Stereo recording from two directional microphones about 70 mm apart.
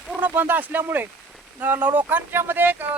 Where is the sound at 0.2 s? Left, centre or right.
Right.